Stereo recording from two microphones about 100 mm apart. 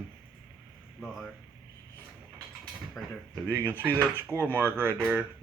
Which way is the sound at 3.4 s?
20° right (ahead or behind).